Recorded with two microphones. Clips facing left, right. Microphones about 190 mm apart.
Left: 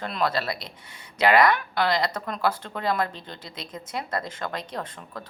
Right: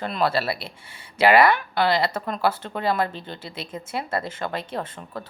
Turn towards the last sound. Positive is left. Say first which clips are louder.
# right 3 dB
turn(degrees=-5)  # may be behind; listen again after turning